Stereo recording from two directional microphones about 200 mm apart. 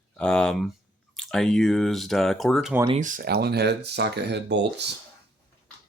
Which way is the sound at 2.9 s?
40° right (ahead or behind).